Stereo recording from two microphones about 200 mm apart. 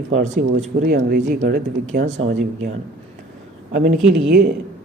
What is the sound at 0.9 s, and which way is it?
Speech, 50° right (ahead or behind).